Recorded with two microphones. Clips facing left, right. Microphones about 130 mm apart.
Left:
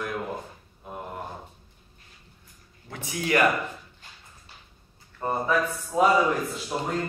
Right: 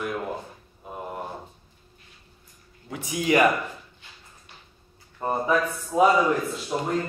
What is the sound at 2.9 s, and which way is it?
Speech, 15° right (ahead or behind).